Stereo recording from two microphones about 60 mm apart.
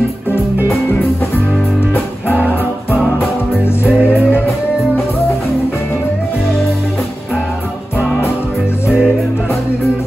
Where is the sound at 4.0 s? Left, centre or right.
Right.